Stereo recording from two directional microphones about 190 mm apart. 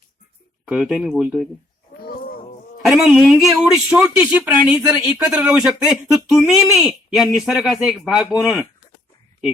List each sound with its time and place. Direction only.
0.7 s speech: 5° right (ahead or behind)
2.0 s a sound: 50° left (ahead or behind)
2.9 s speech: 5° right (ahead or behind)